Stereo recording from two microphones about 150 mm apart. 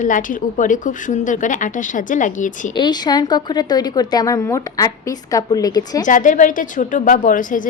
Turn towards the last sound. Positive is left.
turn(degrees=60)  # may be behind; listen again after turning